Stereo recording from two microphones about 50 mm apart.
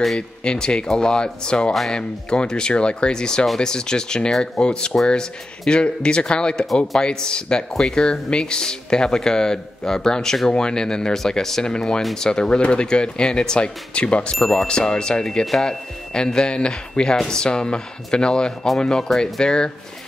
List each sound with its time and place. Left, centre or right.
0.4 s speech: centre
1.7 s speech: centre
2.0 s speech: centre